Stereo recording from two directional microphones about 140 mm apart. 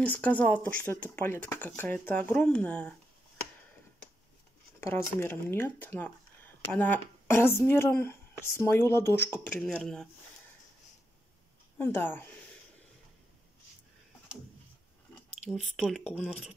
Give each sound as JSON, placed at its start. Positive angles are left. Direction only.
{"t": 0.0, "sound": "speech", "side_deg": 10}
{"t": 4.7, "sound": "speech", "side_deg": 20}
{"t": 11.8, "sound": "speech", "side_deg": 15}
{"t": 15.5, "sound": "speech", "side_deg": 0}